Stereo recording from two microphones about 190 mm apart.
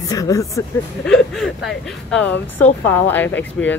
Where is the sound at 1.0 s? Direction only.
Centre (ahead or behind).